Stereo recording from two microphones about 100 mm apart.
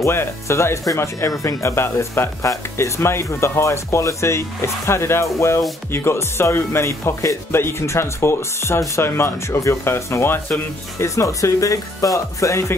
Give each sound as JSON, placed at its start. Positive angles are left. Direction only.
{"t": 0.0, "sound": "speech", "side_deg": 25}